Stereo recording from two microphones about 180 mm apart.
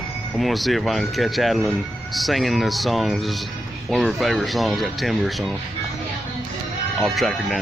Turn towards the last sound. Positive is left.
turn(degrees=0)  # may be behind; listen again after turning